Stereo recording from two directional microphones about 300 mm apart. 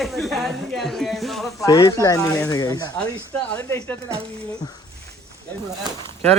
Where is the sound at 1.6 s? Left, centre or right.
Centre.